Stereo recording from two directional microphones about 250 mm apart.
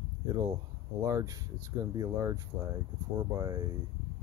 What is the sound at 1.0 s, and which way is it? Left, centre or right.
Speech, centre.